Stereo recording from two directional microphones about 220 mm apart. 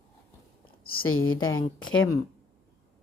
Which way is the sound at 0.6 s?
40° left (ahead or behind).